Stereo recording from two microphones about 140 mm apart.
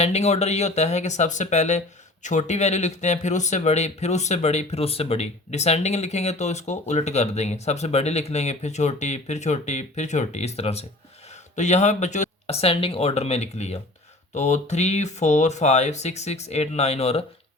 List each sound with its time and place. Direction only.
0.0 s speech: 50° left (ahead or behind)